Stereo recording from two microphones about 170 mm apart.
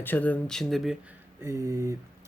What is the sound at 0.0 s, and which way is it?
Speech, 10° left (ahead or behind).